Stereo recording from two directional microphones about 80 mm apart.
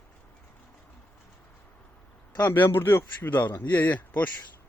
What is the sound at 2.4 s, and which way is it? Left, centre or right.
Speech, left.